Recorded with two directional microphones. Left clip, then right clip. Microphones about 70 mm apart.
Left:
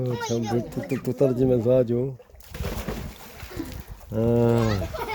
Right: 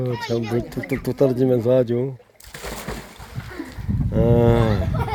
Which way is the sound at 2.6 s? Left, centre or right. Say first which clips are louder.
Right 2 dB; right.